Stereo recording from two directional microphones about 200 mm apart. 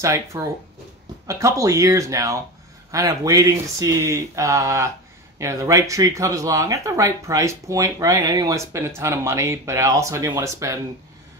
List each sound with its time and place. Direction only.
0.0 s speech: 15° right (ahead or behind)